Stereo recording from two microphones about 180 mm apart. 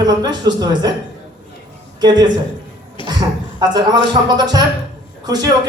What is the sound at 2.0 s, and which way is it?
A man's voice, 20° right (ahead or behind).